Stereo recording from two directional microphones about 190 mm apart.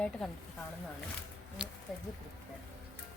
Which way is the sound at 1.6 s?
5° right (ahead or behind).